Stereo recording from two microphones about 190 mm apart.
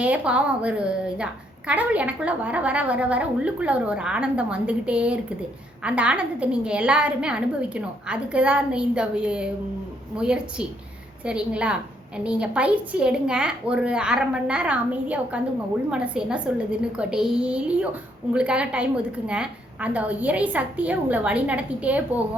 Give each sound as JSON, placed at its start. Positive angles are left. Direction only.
{"t": 0.0, "sound": "a woman's voice", "side_deg": -5}